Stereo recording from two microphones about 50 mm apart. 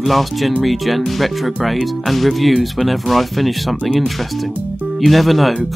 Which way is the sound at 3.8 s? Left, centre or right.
Centre.